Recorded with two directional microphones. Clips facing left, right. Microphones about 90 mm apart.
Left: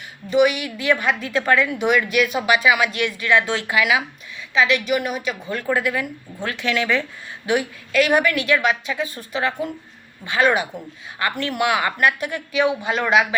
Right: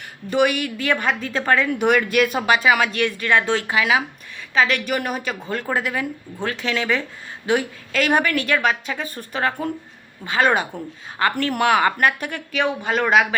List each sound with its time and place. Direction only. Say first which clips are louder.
0.3 s a woman's voice: left 2 dB; 45° right (ahead or behind); by 4.0 s 30° right (ahead or behind)
4.5 s speech: left 1 dB; 45° right (ahead or behind)
5.6 s a woman's voice: left 3 dB; 25° right (ahead or behind); by 13.2 s 45° right (ahead or behind)